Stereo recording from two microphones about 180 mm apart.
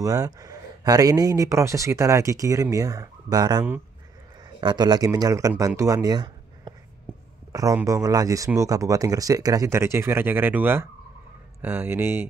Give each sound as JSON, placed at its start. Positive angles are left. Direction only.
{"t": 0.0, "sound": "speech", "side_deg": -20}